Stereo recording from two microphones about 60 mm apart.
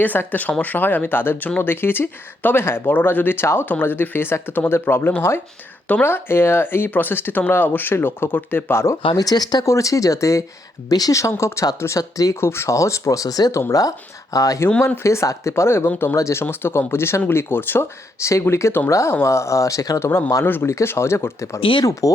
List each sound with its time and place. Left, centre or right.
0.0 s speech: left
9.1 s speech: left
10.8 s speech: left
11.9 s speech: left
12.4 s speech: left
15.0 s speech: left
18.2 s speech: left
18.9 s speech: left
20.0 s speech: left
20.7 s speech: left